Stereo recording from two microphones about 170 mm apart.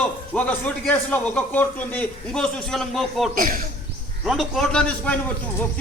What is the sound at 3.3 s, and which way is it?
Speech, 55° right (ahead or behind).